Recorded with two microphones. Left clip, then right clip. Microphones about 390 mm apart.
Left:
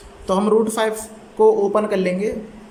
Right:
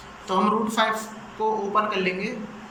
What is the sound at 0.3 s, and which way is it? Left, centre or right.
A woman's voice, centre.